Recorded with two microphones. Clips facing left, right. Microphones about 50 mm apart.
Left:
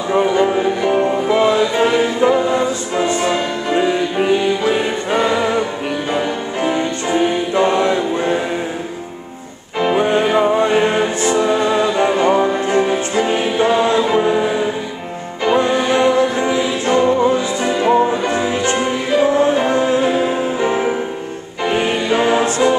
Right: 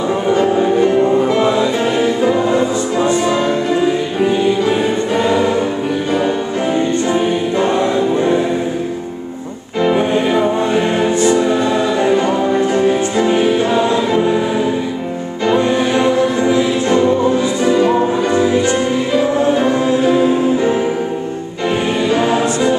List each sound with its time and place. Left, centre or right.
1.3 s music: centre
2.3 s music: centre
3.3 s music: left
5.1 s choir: left
6.1 s music: centre
7.8 s choir: left
9.8 s music: centre
12.8 s music: centre
16.3 s music: centre
18.5 s music: left
19.6 s choir: left
20.1 s music: centre
21.7 s choir: centre